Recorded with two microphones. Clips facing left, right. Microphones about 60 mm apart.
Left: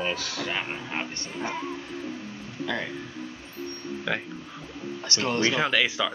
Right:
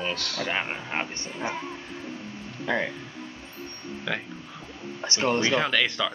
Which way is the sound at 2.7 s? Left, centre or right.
Right.